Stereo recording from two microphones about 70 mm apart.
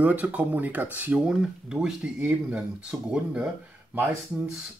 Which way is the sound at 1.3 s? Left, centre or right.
Centre.